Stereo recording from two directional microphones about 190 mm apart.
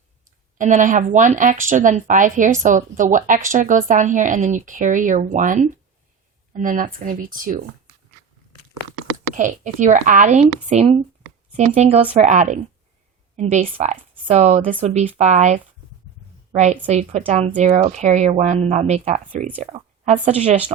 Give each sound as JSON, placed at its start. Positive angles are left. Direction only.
{"t": 0.6, "sound": "speech", "side_deg": -45}
{"t": 9.3, "sound": "a woman's voice", "side_deg": -40}